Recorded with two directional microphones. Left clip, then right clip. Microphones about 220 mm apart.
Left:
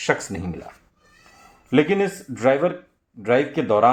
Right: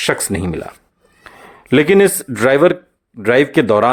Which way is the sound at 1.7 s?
40° right (ahead or behind).